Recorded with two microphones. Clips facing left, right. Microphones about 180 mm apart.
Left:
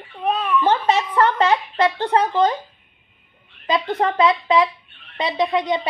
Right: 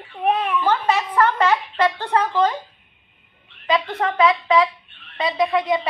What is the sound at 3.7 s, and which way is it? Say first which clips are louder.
A woman's voice: left 1 dB; 30° left (ahead or behind).